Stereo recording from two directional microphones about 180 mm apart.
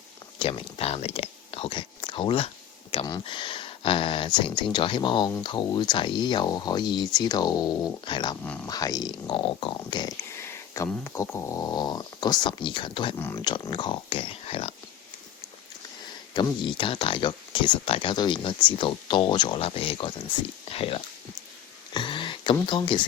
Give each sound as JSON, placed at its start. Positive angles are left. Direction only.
{"t": 0.3, "sound": "speech", "side_deg": 30}
{"t": 13.1, "sound": "speech", "side_deg": 15}
{"t": 13.5, "sound": "speech", "side_deg": 25}
{"t": 16.3, "sound": "speech", "side_deg": 25}
{"t": 21.9, "sound": "a sound", "side_deg": 25}
{"t": 22.5, "sound": "speech", "side_deg": 25}